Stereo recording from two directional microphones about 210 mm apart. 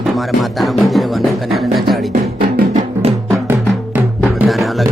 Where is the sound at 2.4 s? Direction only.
45° right (ahead or behind).